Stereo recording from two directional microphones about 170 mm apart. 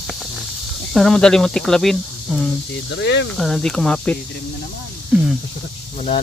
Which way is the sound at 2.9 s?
90° left.